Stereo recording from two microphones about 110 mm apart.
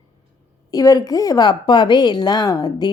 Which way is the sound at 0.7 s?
35° left (ahead or behind).